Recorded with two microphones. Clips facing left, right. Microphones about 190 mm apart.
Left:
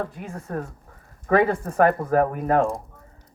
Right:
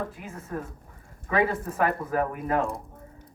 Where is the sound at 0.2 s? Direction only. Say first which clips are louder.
Left 4 dB; 40° left (ahead or behind).